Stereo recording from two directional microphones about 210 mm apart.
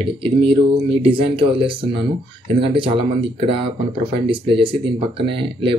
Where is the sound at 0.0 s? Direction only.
25° right (ahead or behind).